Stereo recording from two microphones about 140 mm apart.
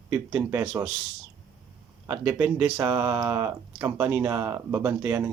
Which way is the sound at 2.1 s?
15° right (ahead or behind).